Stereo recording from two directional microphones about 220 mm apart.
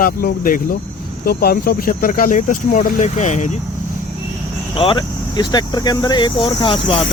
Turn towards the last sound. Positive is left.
turn(degrees=25)  # may be behind; listen again after turning